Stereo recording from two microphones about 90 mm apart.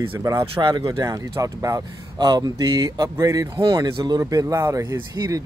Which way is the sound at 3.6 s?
55° right (ahead or behind).